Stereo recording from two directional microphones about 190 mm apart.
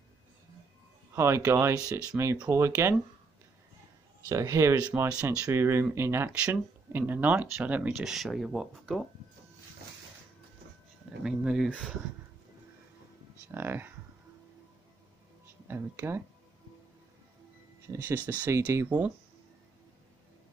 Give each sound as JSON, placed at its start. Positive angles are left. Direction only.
{"t": 1.1, "sound": "speech", "side_deg": -15}
{"t": 4.3, "sound": "speech", "side_deg": -15}
{"t": 11.2, "sound": "speech", "side_deg": -5}
{"t": 13.5, "sound": "speech", "side_deg": -10}
{"t": 15.7, "sound": "speech", "side_deg": -10}
{"t": 17.8, "sound": "speech", "side_deg": -15}